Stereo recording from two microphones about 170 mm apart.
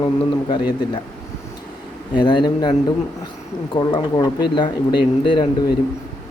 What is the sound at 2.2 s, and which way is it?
A man's voice, 30° left (ahead or behind).